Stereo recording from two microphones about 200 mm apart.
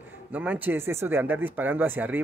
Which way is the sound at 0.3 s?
10° right (ahead or behind).